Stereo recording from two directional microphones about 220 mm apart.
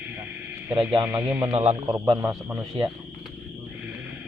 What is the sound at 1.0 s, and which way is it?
Speech, 10° right (ahead or behind).